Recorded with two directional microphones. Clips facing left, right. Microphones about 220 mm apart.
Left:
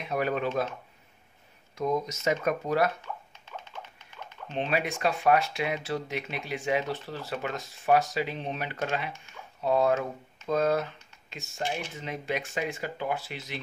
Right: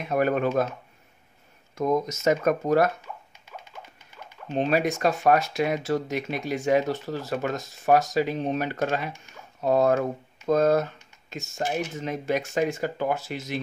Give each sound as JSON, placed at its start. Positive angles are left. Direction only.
{"t": 0.0, "sound": "speech", "side_deg": -50}
{"t": 1.8, "sound": "speech", "side_deg": -45}
{"t": 3.0, "sound": "a sound", "side_deg": -10}
{"t": 4.5, "sound": "speech", "side_deg": -40}